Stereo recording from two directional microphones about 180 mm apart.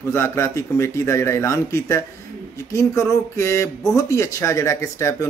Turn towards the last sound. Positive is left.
turn(degrees=15)  # may be behind; listen again after turning